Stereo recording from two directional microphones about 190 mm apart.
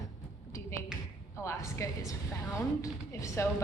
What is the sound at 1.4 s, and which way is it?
A woman's voice, 15° left (ahead or behind).